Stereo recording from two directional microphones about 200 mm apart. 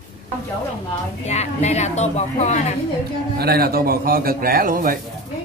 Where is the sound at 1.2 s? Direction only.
35° left (ahead or behind).